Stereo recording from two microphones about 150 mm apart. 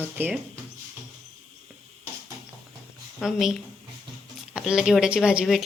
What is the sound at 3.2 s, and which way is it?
Speech, centre (ahead or behind).